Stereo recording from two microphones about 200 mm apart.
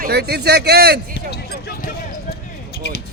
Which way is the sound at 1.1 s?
55° left (ahead or behind).